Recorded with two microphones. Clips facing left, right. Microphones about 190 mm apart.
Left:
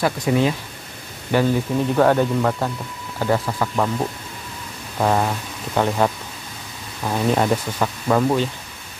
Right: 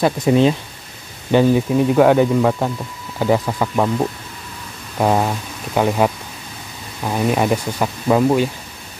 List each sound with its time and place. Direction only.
0.0 s speech: 25° right (ahead or behind)
1.3 s speech: 15° right (ahead or behind)
4.9 s speech: 15° right (ahead or behind)